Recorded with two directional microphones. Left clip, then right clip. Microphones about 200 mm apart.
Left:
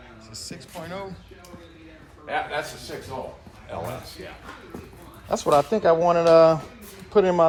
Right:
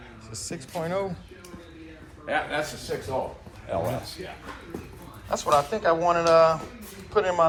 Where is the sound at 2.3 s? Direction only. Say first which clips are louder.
Even; 35° left (ahead or behind).